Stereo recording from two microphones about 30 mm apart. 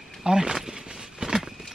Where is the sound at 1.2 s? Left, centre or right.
Right.